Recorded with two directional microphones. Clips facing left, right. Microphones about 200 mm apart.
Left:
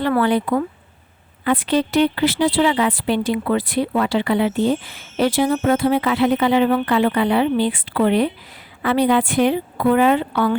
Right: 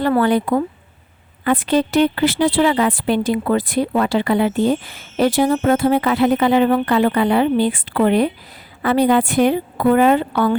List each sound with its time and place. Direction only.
0.2 s a woman's voice: 45° right (ahead or behind)